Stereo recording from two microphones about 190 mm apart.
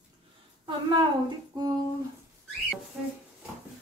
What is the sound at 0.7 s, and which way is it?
Speech, 25° right (ahead or behind).